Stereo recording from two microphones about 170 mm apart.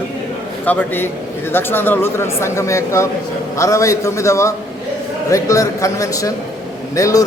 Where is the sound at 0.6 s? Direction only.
10° left (ahead or behind).